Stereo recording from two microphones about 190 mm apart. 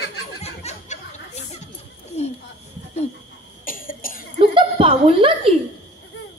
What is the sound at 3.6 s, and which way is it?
Cough, 50° left (ahead or behind).